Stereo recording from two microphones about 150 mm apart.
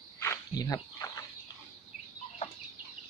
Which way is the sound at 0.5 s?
25° left (ahead or behind).